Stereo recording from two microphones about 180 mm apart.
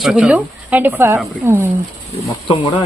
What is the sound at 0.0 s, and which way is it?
Speech, 5° right (ahead or behind).